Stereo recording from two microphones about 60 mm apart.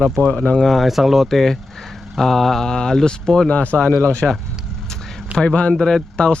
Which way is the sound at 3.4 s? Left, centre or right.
Left.